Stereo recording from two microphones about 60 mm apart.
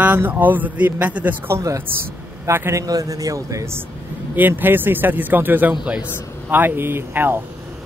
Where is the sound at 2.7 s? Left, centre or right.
Right.